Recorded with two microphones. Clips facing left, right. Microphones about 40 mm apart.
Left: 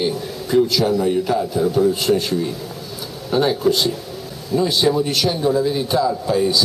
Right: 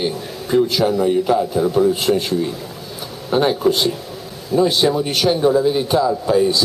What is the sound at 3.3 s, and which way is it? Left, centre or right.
A man's voice, centre.